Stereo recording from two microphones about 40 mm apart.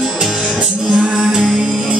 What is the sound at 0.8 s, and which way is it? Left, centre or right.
Music, centre.